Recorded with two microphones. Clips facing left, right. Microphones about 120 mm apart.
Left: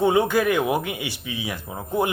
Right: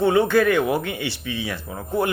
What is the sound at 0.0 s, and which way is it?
Speech, 15° left (ahead or behind).